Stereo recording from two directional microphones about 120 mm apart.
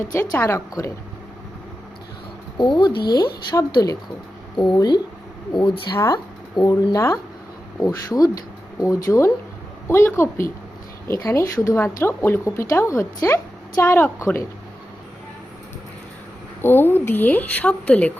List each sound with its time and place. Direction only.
0.1 s speech: 20° left (ahead or behind)
2.6 s speech: 40° left (ahead or behind)
4.5 s a woman's voice: 40° left (ahead or behind); by 14.3 s 20° left (ahead or behind)
16.6 s speech: 20° left (ahead or behind)